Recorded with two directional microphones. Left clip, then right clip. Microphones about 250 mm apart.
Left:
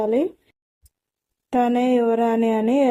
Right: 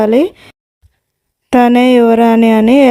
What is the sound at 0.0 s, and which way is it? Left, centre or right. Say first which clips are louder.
Speech: right 10 dB; right.